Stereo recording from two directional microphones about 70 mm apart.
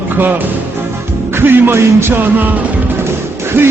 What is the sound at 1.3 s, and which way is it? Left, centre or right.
Music, right.